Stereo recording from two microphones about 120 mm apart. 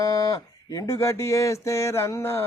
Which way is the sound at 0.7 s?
25° left (ahead or behind).